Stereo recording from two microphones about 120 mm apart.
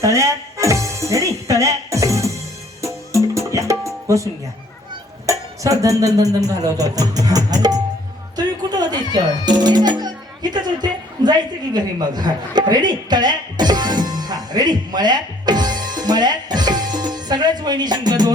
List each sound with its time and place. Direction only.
0.0 s music: 25° right (ahead or behind)